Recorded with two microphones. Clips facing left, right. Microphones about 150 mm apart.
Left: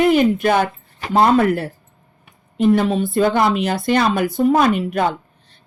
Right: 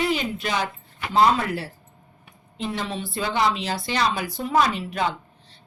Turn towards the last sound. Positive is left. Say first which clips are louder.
# left 6 dB
turn(degrees=50)  # may be behind; listen again after turning